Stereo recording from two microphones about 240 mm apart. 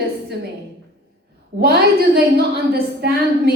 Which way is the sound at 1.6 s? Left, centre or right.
Right.